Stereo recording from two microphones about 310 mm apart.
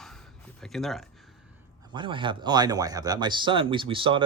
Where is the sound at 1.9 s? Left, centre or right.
Centre.